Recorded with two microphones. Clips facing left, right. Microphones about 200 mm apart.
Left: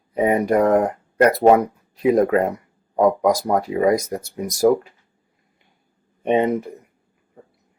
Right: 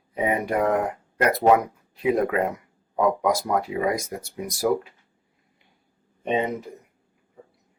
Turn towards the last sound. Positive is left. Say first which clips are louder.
# left 6 dB
turn(degrees=60)  # may be behind; listen again after turning